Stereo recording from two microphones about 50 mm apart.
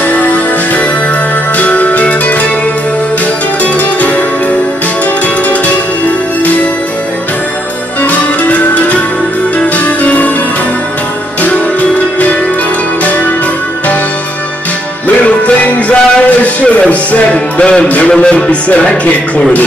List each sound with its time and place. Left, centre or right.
0.1 s music: left
9.8 s music: left
15.2 s music: left
17.8 s speech: left
18.1 s music: centre